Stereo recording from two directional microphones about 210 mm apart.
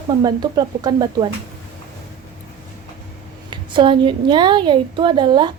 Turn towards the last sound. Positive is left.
turn(degrees=-20)  # may be behind; listen again after turning